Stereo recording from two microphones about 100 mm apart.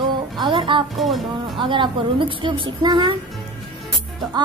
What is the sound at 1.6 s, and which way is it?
A woman's voice, 55° right (ahead or behind).